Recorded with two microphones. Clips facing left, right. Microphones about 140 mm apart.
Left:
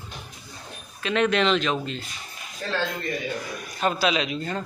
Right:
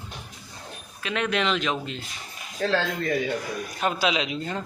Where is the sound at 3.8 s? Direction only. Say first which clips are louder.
Left 2 dB; 15° right (ahead or behind).